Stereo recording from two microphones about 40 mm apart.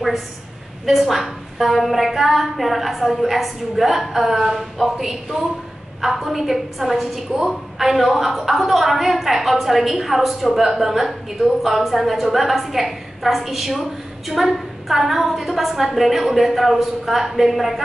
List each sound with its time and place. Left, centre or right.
0.9 s a woman's voice: centre